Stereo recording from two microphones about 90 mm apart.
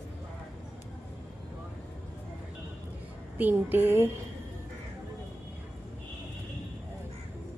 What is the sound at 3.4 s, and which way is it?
Speech, 20° right (ahead or behind).